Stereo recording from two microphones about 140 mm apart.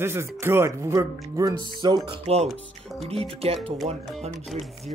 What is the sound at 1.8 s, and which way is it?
Speech, 35° right (ahead or behind).